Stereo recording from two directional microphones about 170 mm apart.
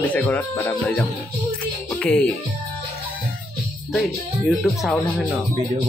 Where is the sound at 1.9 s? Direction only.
10° left (ahead or behind).